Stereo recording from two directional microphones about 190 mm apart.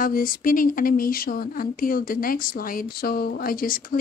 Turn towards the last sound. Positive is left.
turn(degrees=50)  # may be behind; listen again after turning